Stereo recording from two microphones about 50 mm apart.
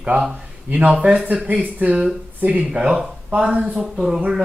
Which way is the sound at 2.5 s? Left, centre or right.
Centre.